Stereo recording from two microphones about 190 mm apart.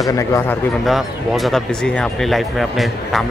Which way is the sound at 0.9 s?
Centre (ahead or behind).